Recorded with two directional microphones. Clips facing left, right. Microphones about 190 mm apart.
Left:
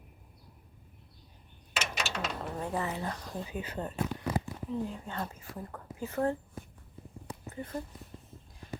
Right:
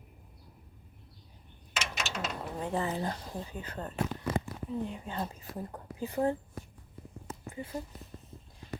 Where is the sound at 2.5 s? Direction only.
25° right (ahead or behind).